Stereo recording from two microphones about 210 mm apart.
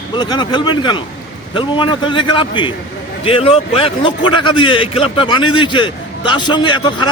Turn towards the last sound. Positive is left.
turn(degrees=20)  # may be behind; listen again after turning